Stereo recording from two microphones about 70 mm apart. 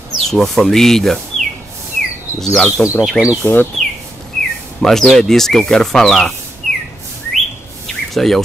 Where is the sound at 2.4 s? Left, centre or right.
Centre.